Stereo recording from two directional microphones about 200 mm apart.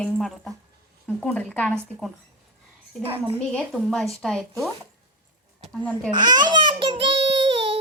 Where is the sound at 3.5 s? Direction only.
Centre (ahead or behind).